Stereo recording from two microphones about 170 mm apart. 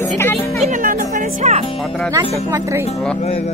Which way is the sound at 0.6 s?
55° right (ahead or behind).